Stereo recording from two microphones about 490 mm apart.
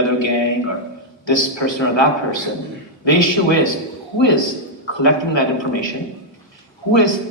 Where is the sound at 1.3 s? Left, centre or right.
Left.